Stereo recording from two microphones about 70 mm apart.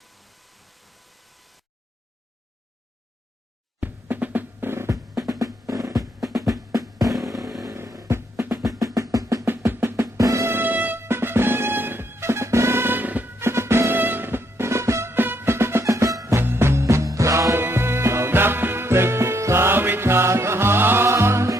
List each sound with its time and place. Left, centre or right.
3.8 s drum: right
5.3 s drum: right
6.1 s music: centre
7.6 s a sound: right
8.4 s percussion: right
8.7 s drum: right
9.6 s drum: right
10.2 s music: right
10.5 s music: right
11.0 s music: right
13.4 s music: right
15.1 s music: right